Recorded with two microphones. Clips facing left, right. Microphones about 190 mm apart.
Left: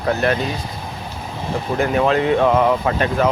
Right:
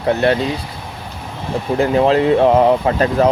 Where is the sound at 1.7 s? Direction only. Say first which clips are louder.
Right 4 dB; 30° right (ahead or behind).